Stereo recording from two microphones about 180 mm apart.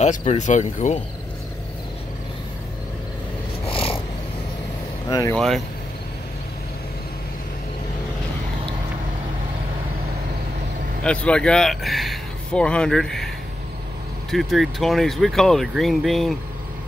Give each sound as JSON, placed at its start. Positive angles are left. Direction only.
{"t": 0.0, "sound": "speech", "side_deg": 40}
{"t": 3.7, "sound": "cat", "side_deg": 30}
{"t": 5.3, "sound": "speech", "side_deg": 0}
{"t": 11.1, "sound": "speech", "side_deg": 5}
{"t": 14.3, "sound": "speech", "side_deg": 0}